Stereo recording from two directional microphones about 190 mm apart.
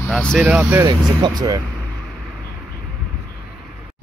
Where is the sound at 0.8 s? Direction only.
20° right (ahead or behind).